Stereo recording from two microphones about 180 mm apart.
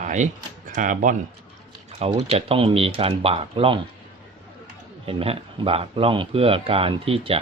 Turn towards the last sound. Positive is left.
turn(degrees=-30)  # may be behind; listen again after turning